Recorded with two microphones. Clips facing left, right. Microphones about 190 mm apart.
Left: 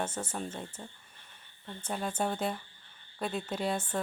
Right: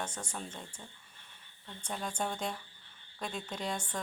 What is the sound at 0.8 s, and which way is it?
Speech, 35° left (ahead or behind).